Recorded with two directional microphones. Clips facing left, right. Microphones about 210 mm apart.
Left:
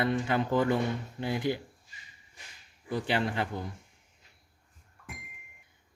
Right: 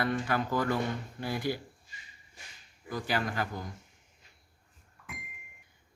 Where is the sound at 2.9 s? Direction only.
30° left (ahead or behind).